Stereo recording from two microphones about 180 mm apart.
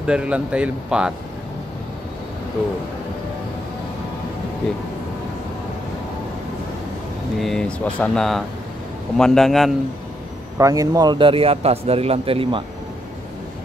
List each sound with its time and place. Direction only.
0.0 s speech: 5° right (ahead or behind)
7.3 s speech: centre (ahead or behind)
10.6 s speech: 20° right (ahead or behind)